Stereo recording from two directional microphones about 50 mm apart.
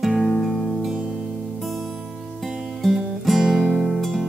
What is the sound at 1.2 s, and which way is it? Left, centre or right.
Music, centre.